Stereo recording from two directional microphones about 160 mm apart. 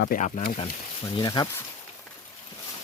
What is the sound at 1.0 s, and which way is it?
Speech, 25° left (ahead or behind).